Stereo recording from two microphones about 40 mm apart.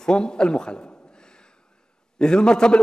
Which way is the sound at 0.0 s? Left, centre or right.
Centre.